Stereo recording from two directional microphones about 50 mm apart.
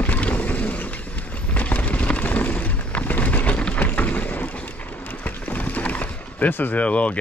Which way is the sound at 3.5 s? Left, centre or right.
Left.